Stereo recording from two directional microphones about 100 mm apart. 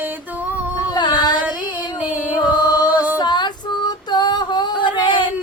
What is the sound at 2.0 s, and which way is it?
Music, 15° right (ahead or behind).